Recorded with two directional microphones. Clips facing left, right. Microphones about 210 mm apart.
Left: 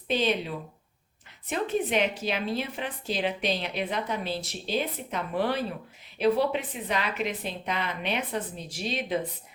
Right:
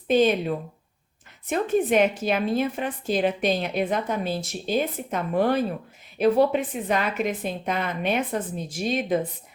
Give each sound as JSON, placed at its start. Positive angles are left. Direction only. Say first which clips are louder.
{"t": 0.1, "sound": "speech", "louder": "right 7 dB", "side_deg": -50}